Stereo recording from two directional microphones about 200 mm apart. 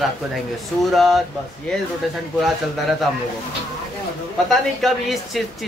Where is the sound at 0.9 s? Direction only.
Centre (ahead or behind).